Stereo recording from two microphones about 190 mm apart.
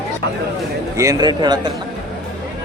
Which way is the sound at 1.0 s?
20° right (ahead or behind).